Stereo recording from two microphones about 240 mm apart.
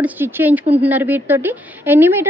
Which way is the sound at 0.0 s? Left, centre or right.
Centre.